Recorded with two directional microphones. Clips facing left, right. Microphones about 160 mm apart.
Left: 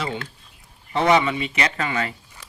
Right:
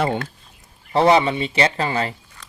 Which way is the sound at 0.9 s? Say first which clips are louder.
Right 3 dB; 35° right (ahead or behind).